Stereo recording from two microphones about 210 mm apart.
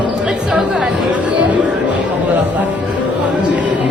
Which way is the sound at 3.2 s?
5° right (ahead or behind).